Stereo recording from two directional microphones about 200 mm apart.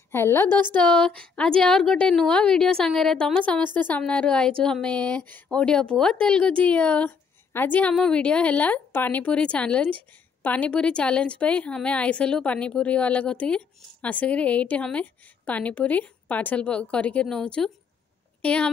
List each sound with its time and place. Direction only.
0.1 s a woman's voice: 15° left (ahead or behind)
0.5 s speech: 20° right (ahead or behind)
0.7 s a woman's voice: 5° left (ahead or behind)